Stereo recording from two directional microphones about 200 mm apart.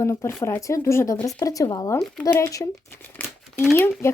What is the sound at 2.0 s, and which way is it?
Speech, centre (ahead or behind).